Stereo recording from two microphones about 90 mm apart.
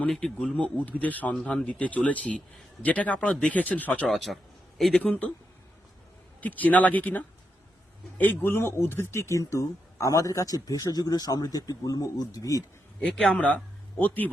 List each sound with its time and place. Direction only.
0.1 s speech: 5° left (ahead or behind)
0.6 s speech: 15° left (ahead or behind)
4.1 s speech: centre (ahead or behind)
5.0 s speech: 15° left (ahead or behind)
6.4 s speech: 20° left (ahead or behind); by 12.6 s 40° left (ahead or behind)
13.0 s speech: 10° left (ahead or behind)